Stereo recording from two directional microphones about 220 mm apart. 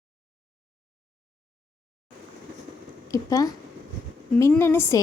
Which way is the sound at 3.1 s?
15° left (ahead or behind).